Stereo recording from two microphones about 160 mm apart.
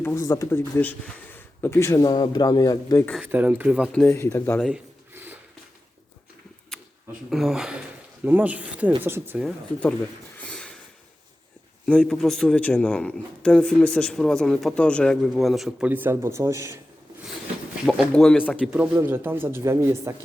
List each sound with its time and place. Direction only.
0.0 s speech: 15° left (ahead or behind)
3.2 s speech: 10° right (ahead or behind)
3.9 s speech: 15° left (ahead or behind)
4.6 s a sound: 10° right (ahead or behind)
7.3 s speech: centre (ahead or behind)
10.3 s a sound: 5° left (ahead or behind)
11.9 s speech: 5° left (ahead or behind); by 16.8 s 20° right (ahead or behind)
17.8 s speech: 5° right (ahead or behind)
18.6 s speech: 5° right (ahead or behind)
18.9 s speech: 15° right (ahead or behind)